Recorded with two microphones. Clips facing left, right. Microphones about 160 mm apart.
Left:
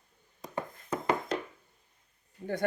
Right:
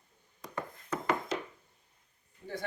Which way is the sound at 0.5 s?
25° left (ahead or behind).